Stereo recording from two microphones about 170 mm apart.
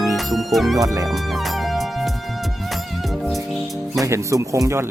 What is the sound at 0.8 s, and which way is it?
Speech, 20° right (ahead or behind).